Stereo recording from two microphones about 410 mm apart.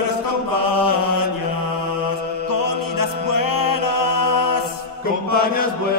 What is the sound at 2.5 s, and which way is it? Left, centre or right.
Music, left.